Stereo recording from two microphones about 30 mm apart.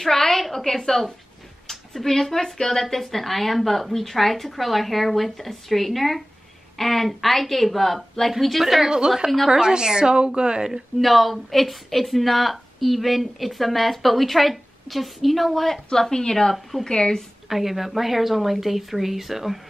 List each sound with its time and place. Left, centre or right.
0.0 s a woman's voice: centre
8.8 s a woman's voice: right
11.0 s a woman's voice: centre
15.6 s a woman's voice: centre
16.1 s speech: left
17.5 s a woman's voice: centre